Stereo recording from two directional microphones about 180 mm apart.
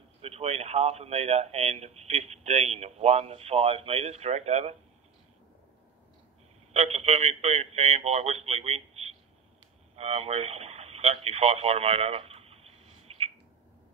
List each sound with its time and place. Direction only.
0.2 s a man's voice: 35° right (ahead or behind)
6.7 s a man's voice: 35° right (ahead or behind)
9.9 s radio: 35° right (ahead or behind)